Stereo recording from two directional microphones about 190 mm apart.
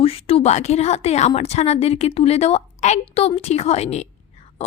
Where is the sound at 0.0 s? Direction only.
30° left (ahead or behind).